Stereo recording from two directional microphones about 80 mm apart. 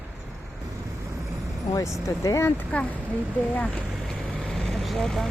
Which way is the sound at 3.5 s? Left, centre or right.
Centre.